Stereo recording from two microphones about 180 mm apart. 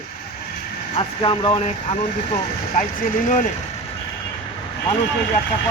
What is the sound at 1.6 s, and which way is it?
Speech, 40° left (ahead or behind).